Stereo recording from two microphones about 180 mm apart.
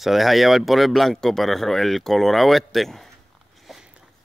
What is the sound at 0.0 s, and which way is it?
Speech, centre (ahead or behind).